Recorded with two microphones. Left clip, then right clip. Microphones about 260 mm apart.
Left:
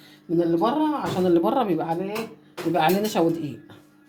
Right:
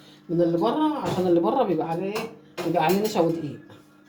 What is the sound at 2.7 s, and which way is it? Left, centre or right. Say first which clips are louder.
Speech: left 1 dB; left.